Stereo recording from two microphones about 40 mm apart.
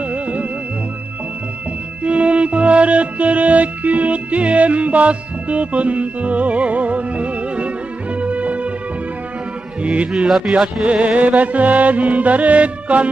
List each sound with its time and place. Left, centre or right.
0.1 s music: right
2.0 s music: right
10.1 s a man's voice: centre
10.9 s music: right